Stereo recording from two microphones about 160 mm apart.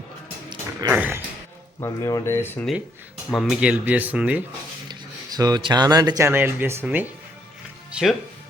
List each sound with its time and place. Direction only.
0.8 s speech: 15° right (ahead or behind)
1.8 s speech: 15° left (ahead or behind)
3.2 s speech: centre (ahead or behind)
4.9 s speech: 25° right (ahead or behind)
7.9 s music: 5° right (ahead or behind)